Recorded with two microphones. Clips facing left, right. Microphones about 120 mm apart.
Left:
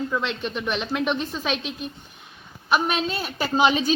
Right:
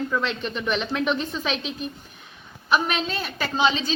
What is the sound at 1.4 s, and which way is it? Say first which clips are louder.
Speech: left 1 dB; 40° left (ahead or behind).